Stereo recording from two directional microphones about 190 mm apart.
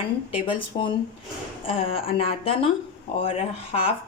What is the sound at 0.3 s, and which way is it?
A woman's voice, 25° left (ahead or behind).